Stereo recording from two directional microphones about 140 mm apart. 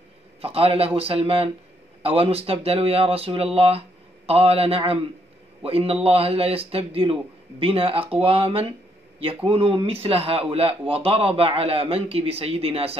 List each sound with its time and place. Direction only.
0.4 s a man's voice: 45° right (ahead or behind)